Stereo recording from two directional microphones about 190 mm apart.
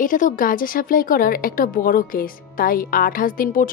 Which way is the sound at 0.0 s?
45° left (ahead or behind).